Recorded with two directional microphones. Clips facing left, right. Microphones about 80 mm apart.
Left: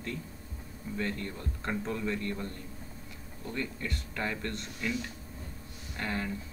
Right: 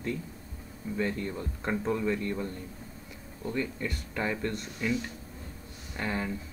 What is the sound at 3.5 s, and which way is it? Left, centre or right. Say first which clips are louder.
Speech: right 4 dB; centre.